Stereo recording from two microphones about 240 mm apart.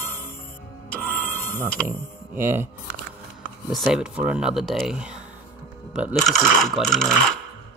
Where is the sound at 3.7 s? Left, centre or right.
Centre.